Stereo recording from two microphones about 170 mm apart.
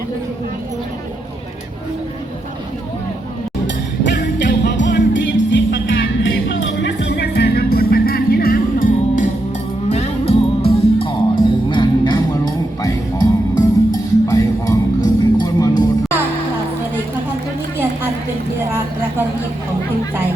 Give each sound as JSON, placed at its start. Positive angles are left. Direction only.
{"t": 4.0, "sound": "music", "side_deg": 90}
{"t": 9.9, "sound": "music", "side_deg": 40}